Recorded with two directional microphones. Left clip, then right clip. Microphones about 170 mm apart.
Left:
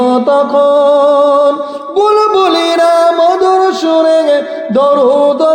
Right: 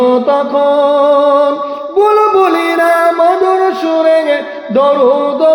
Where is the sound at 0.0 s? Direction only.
40° left (ahead or behind).